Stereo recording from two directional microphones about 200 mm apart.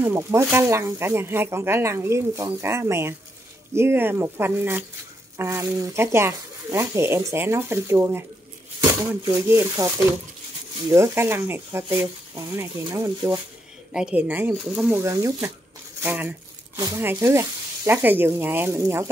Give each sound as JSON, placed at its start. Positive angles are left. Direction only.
{"t": 0.0, "sound": "speech", "side_deg": -15}
{"t": 9.2, "sound": "speech", "side_deg": -15}
{"t": 10.9, "sound": "speech", "side_deg": -15}